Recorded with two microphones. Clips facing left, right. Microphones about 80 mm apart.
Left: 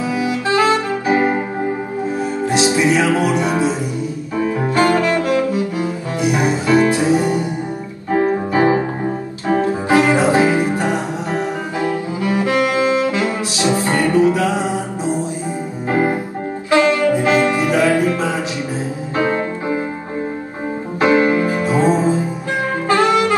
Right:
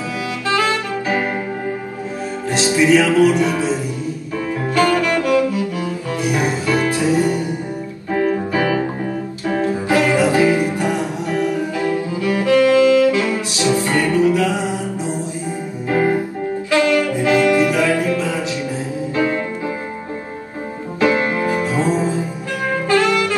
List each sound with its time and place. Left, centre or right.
0.2 s saxophone: left
2.4 s music: left
21.0 s music: left
22.8 s saxophone: left